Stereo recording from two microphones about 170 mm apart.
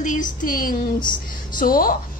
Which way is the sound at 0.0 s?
50° left (ahead or behind).